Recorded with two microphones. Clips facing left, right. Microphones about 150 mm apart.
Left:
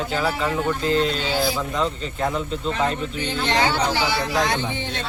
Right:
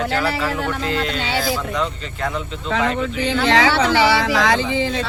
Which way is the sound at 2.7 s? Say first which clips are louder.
Right 5 dB; 90° right.